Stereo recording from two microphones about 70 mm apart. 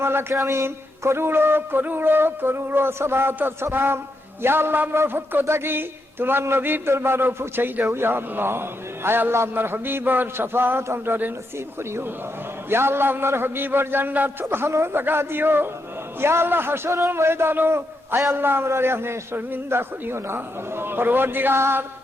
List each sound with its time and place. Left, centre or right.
0.0 s a man's voice: right
12.7 s a man's voice: right